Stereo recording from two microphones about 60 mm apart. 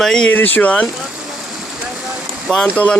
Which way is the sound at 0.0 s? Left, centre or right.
Centre.